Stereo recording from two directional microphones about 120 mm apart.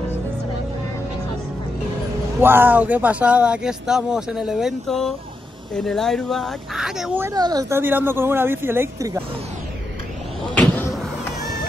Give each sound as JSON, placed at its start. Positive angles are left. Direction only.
{"t": 2.4, "sound": "speech", "side_deg": -15}
{"t": 7.3, "sound": "speech", "side_deg": -35}
{"t": 7.7, "sound": "a woman's voice", "side_deg": -15}
{"t": 10.5, "sound": "vehicle", "side_deg": 10}